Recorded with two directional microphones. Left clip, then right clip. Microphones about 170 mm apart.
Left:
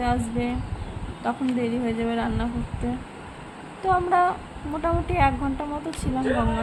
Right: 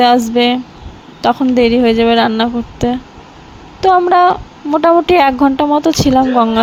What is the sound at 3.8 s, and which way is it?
A woman's voice, 50° right (ahead or behind).